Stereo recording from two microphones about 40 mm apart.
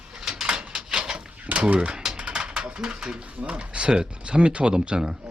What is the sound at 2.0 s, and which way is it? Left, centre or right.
Typing, centre.